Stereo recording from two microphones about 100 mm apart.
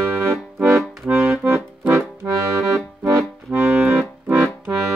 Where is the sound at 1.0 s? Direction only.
20° right (ahead or behind).